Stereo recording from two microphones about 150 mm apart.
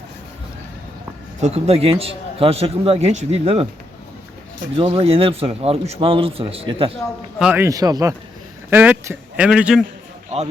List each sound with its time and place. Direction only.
1.4 s a man's voice: 45° right (ahead or behind)
4.8 s a man's voice: 40° right (ahead or behind)
7.3 s a man's voice: 5° right (ahead or behind)
7.6 s a man's voice: 25° right (ahead or behind)
8.7 s speech: 10° right (ahead or behind)